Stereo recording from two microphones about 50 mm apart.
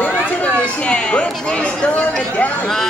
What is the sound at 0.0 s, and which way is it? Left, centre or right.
Chatter, left.